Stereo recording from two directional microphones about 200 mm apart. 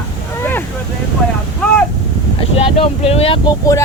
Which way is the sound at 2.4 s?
30° left (ahead or behind).